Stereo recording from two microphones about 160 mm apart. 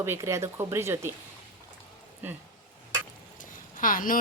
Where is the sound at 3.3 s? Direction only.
55° left (ahead or behind).